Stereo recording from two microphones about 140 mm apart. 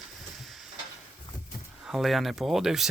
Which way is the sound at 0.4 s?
Centre (ahead or behind).